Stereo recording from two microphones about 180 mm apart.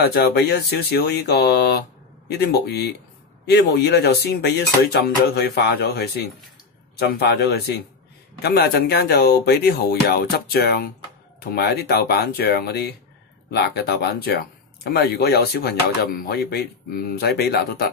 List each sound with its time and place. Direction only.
0.0 s speech: 60° left (ahead or behind)